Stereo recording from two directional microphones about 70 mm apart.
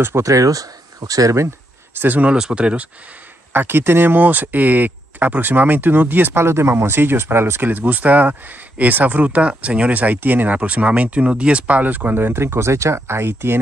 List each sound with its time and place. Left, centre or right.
0.0 s speech: right
2.0 s speech: right
2.3 s speech: centre
3.5 s speech: right